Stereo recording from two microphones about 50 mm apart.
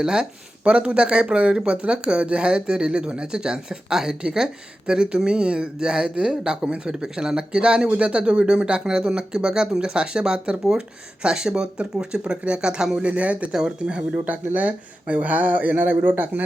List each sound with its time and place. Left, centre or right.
0.0 s speech: centre
13.5 s speech: centre
14.5 s speech: right